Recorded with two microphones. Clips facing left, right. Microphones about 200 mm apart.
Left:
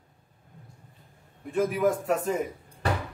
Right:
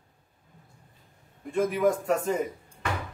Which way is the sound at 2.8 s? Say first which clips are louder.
Left 3 dB; 35° left (ahead or behind).